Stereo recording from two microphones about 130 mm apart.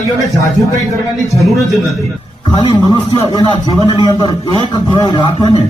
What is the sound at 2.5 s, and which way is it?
A man's voice, 35° left (ahead or behind).